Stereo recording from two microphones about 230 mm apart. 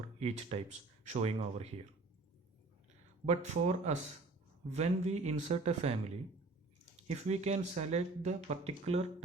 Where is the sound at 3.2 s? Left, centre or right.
Right.